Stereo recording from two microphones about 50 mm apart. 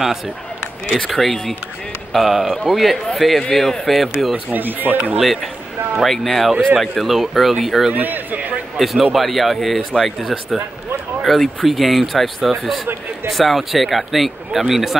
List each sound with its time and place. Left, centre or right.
0.9 s a man's voice: centre
4.5 s speech: right
5.2 s a man's voice: centre
7.9 s speech: right
8.7 s a man's voice: centre